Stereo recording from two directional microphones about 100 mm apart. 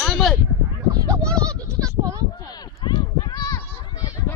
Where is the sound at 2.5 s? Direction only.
45° left (ahead or behind).